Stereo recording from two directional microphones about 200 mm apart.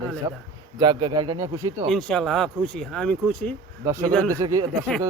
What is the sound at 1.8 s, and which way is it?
Speech, 5° left (ahead or behind).